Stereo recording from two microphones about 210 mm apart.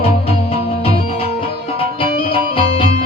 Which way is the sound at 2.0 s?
25° left (ahead or behind).